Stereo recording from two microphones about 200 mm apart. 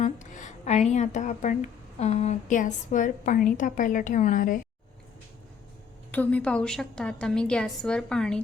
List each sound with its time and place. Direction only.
0.0 s speech: 35° left (ahead or behind)
6.1 s a woman's voice: 10° left (ahead or behind)